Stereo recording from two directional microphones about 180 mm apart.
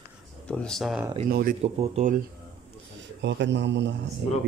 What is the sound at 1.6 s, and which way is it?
Speech, 35° right (ahead or behind).